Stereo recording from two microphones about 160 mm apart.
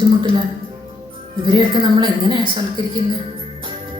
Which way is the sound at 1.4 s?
30° right (ahead or behind).